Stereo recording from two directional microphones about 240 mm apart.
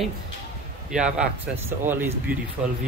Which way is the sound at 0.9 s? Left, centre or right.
Centre.